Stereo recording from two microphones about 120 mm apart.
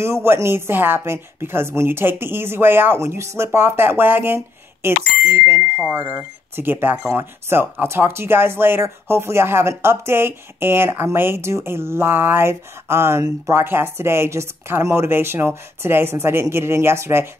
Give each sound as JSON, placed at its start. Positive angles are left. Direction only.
{"t": 0.0, "sound": "speech", "side_deg": -20}